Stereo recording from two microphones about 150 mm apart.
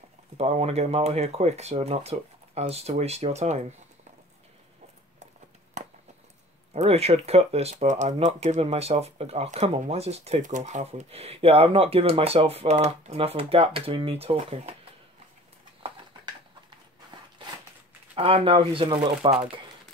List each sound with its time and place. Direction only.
0.4 s speech: 45° right (ahead or behind)
5.8 s a sound: 50° right (ahead or behind)
6.7 s speech: 45° right (ahead or behind)
18.1 s speech: 40° right (ahead or behind)